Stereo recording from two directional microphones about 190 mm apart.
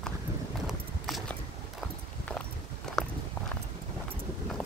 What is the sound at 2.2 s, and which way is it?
Walk, 5° left (ahead or behind).